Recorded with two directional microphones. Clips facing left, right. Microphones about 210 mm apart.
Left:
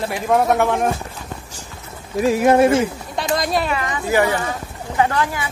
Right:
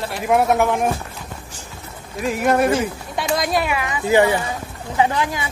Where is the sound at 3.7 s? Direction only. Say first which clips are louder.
Right 2 dB; 10° right (ahead or behind).